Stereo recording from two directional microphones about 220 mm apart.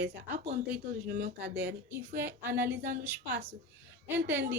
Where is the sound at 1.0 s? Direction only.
40° right (ahead or behind).